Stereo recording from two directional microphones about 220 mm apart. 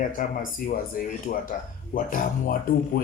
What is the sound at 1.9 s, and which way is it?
A man's voice, 35° left (ahead or behind).